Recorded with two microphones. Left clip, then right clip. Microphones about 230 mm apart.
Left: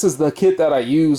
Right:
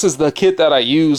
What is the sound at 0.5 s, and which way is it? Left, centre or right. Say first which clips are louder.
Speech: right 3 dB; centre.